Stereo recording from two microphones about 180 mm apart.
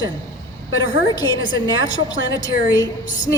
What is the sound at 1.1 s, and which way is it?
A woman's voice, 25° left (ahead or behind).